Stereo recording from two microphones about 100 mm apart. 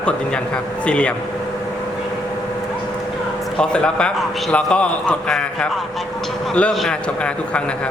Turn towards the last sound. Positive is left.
turn(degrees=10)  # may be behind; listen again after turning